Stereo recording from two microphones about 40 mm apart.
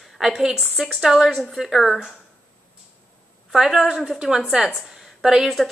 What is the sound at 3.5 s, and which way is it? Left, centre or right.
A woman's voice, centre.